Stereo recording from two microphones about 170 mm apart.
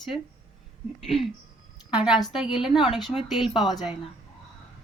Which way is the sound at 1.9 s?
5° right (ahead or behind).